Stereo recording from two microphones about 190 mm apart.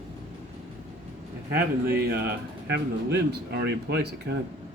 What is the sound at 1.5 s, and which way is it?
Speech, 55° right (ahead or behind).